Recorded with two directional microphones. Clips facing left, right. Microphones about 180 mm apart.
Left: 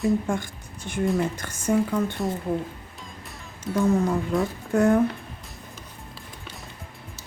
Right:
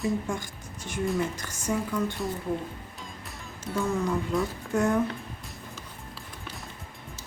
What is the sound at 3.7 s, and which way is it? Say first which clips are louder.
Speech: left 5 dB; centre (ahead or behind).